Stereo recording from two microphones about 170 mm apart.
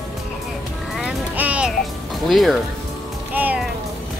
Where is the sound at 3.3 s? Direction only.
10° right (ahead or behind).